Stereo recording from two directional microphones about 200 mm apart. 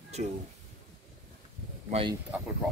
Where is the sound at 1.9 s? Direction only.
25° right (ahead or behind).